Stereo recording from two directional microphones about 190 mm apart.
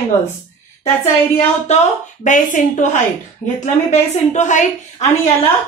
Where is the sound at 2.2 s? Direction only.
40° left (ahead or behind).